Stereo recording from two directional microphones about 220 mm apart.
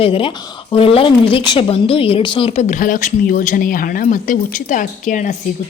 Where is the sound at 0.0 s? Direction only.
25° left (ahead or behind).